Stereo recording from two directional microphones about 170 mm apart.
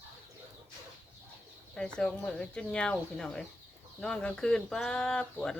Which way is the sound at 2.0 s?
5° left (ahead or behind).